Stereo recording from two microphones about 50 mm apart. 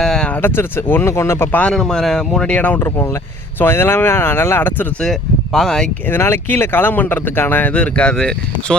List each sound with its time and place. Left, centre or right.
0.0 s a sound: centre
0.4 s speech: left
1.0 s speech: left
1.7 s speech: centre
2.5 s speech: left
3.6 s speech: left
5.0 s speech: centre
6.1 s speech: left
6.5 s speech: left; by 8.7 s centre